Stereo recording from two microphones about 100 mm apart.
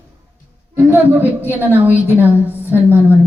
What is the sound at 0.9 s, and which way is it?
A woman's voice, 20° right (ahead or behind).